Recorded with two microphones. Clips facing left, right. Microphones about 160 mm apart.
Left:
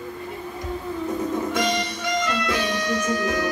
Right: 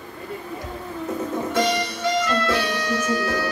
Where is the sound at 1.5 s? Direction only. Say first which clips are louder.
Right 2 dB; 15° left (ahead or behind).